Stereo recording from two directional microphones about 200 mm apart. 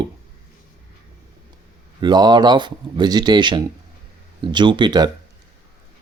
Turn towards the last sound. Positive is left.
turn(degrees=-20)  # may be behind; listen again after turning